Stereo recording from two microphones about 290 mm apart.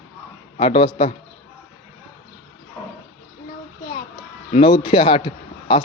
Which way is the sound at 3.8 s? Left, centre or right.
Left.